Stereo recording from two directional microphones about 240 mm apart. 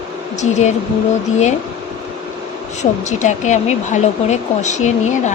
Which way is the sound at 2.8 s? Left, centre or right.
Left.